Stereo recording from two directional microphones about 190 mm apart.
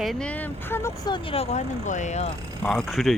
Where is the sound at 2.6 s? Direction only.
Centre (ahead or behind).